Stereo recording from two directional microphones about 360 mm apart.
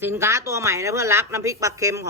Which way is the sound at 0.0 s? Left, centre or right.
Centre.